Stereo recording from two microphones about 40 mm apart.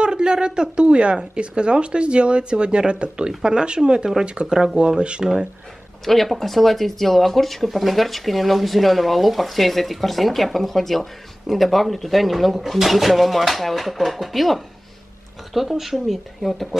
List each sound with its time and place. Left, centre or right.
0.0 s speech: right
6.0 s speech: centre